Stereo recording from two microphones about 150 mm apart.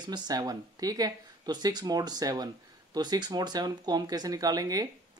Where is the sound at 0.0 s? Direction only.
30° right (ahead or behind).